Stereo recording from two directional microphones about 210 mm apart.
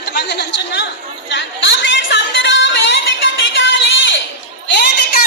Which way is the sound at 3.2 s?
60° left (ahead or behind).